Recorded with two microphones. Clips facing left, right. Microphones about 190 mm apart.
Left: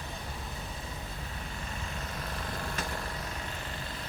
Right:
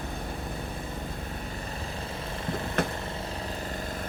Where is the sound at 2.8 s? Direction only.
60° right (ahead or behind).